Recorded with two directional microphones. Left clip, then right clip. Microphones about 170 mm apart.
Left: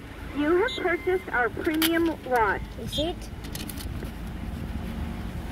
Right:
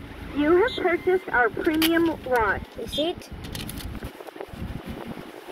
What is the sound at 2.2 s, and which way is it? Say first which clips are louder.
Speech: left 1 dB; 45° left (ahead or behind).